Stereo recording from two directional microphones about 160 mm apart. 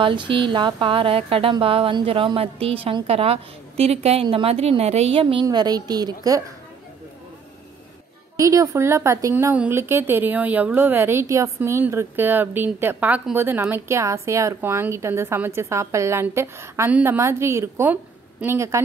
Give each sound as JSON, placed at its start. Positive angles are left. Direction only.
{"t": 0.0, "sound": "a woman's voice", "side_deg": -30}
{"t": 8.4, "sound": "a woman's voice", "side_deg": -20}